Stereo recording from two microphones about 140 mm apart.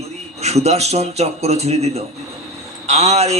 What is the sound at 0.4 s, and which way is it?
A man's voice, 50° right (ahead or behind).